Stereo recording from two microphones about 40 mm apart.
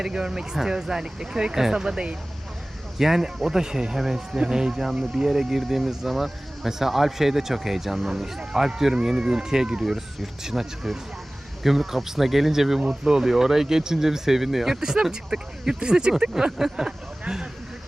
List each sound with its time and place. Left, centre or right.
0.0 s speech: centre
3.0 s speech: centre
16.3 s speech: centre